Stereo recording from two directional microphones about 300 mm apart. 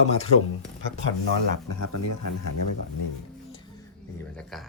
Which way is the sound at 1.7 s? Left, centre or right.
Left.